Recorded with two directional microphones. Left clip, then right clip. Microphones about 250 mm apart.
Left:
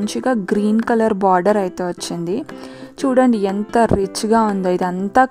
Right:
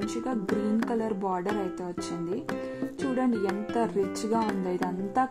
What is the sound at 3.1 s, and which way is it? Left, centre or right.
A woman's voice, left.